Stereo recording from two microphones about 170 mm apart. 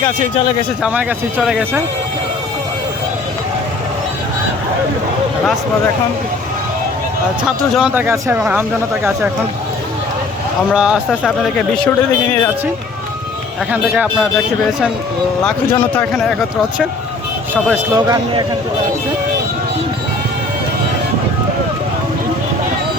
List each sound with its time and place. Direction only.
0.8 s speech: 5° right (ahead or behind)
7.4 s speech: 5° right (ahead or behind)
10.7 s speech: 5° right (ahead or behind)
11.1 s speech: 5° left (ahead or behind)
13.7 s speech: 5° right (ahead or behind)
15.7 s speech: 10° left (ahead or behind)
17.9 s speech: 20° right (ahead or behind)